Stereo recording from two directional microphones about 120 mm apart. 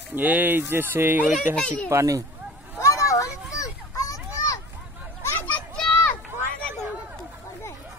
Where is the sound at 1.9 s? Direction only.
25° right (ahead or behind).